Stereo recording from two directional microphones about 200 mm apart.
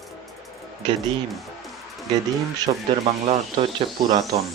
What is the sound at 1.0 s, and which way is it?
Music, centre (ahead or behind).